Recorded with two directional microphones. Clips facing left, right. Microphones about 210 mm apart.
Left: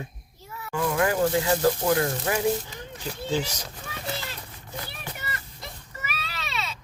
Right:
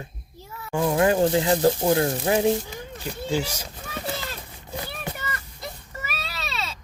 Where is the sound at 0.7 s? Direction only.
25° right (ahead or behind).